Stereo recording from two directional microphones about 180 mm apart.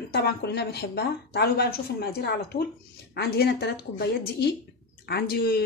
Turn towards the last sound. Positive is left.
turn(degrees=60)  # may be behind; listen again after turning